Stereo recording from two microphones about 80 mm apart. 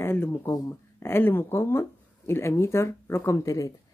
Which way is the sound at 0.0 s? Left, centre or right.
Left.